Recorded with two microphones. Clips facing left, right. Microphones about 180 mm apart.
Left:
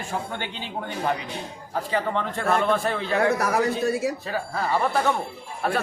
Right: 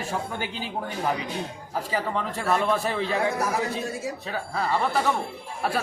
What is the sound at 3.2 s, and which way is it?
Speech, 70° left (ahead or behind).